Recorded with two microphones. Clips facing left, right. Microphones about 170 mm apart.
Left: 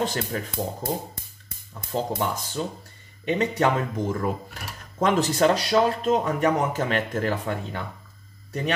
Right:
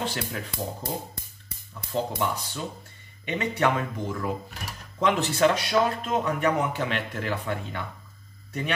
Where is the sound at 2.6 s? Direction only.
40° left (ahead or behind).